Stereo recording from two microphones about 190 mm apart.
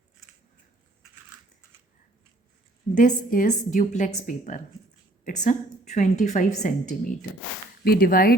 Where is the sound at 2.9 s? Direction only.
45° left (ahead or behind).